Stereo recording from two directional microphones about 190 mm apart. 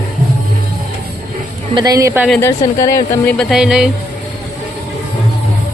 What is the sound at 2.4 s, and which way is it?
Speech, 15° left (ahead or behind).